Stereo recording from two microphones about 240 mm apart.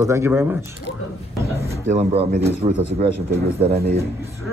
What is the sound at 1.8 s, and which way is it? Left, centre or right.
Speech, right.